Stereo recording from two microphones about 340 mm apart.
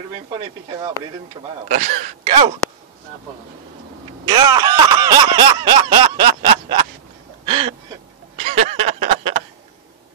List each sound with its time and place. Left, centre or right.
1.7 s speech: centre
4.3 s speech: centre
7.4 s a sound: centre